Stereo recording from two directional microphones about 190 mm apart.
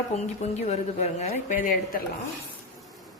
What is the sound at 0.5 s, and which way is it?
A woman's voice, 35° left (ahead or behind).